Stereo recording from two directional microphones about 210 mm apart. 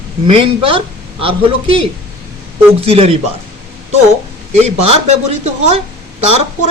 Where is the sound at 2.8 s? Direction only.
30° right (ahead or behind).